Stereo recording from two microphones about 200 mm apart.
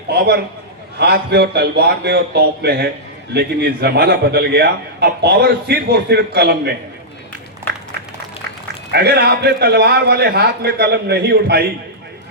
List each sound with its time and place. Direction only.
0.1 s a man's voice: 55° right (ahead or behind)
8.9 s a man's voice: 55° right (ahead or behind)